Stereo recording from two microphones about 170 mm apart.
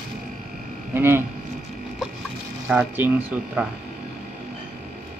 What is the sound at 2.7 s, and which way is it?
Speech, 10° right (ahead or behind).